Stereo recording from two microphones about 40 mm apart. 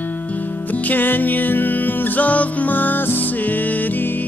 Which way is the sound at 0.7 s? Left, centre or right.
Left.